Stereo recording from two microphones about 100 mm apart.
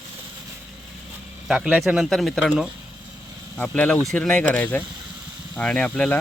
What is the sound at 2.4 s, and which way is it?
Speech, 10° right (ahead or behind).